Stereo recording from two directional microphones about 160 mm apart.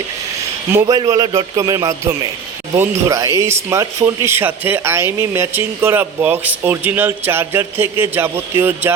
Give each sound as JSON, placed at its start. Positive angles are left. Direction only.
{"t": 0.7, "sound": "speech", "side_deg": -15}
{"t": 0.9, "sound": "a man's voice", "side_deg": -25}